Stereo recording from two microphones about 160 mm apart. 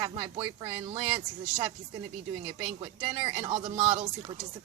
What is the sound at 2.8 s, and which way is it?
Speech, 30° right (ahead or behind).